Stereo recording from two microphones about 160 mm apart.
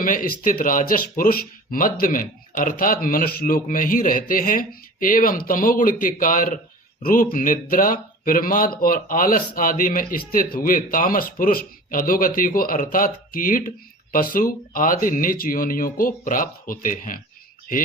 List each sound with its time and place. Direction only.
0.0 s speech: 60° left (ahead or behind)